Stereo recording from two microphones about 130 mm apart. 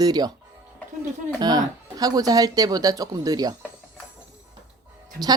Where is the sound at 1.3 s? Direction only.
30° right (ahead or behind).